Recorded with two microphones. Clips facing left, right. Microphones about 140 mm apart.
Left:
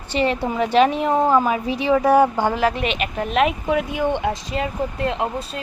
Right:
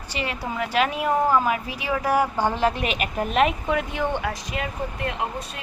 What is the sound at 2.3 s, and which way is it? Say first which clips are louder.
Speech: left 3 dB; 15° left (ahead or behind).